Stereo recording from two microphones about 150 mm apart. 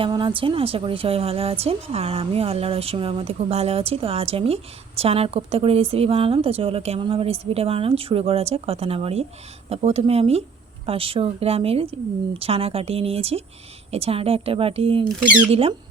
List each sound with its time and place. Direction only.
0.0 s a woman's voice: 35° right (ahead or behind)